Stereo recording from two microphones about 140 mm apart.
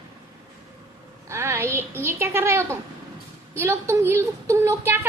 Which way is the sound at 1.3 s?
20° right (ahead or behind).